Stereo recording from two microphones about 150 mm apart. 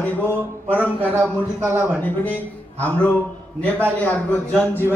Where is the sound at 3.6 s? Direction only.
10° left (ahead or behind).